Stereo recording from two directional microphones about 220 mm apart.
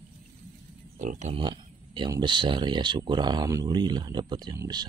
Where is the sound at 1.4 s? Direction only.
20° right (ahead or behind).